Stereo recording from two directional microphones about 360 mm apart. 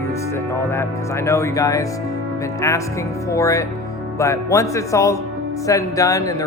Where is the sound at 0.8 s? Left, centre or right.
Centre.